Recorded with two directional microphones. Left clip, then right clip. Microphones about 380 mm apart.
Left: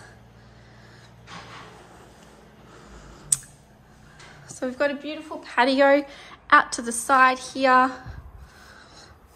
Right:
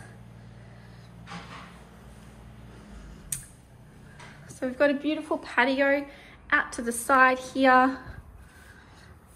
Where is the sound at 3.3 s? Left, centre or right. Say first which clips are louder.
Left 11 dB; centre.